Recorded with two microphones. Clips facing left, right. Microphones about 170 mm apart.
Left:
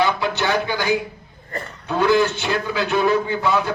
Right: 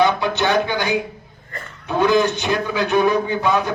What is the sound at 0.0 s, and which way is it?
Speech, 20° right (ahead or behind).